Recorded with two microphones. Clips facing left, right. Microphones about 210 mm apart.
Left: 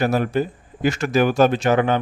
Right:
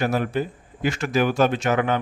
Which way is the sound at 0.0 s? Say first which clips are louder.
Left 3 dB; 40° left (ahead or behind).